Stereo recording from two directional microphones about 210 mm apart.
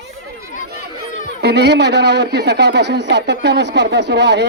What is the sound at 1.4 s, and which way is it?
Speech, 50° right (ahead or behind).